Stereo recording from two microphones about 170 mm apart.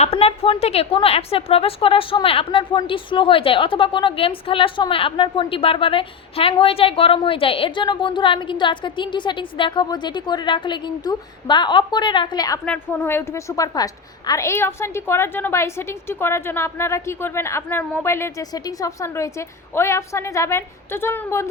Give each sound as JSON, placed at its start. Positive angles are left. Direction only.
{"t": 0.0, "sound": "a woman's voice", "side_deg": 35}
{"t": 12.6, "sound": "a woman's voice", "side_deg": 10}